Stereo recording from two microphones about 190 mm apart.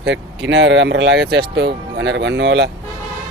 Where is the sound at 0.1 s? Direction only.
70° right (ahead or behind).